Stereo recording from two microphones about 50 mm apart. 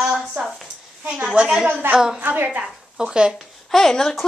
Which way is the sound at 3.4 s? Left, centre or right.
Centre.